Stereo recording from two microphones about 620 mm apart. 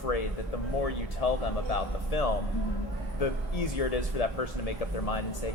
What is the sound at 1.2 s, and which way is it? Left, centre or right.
Speech, left.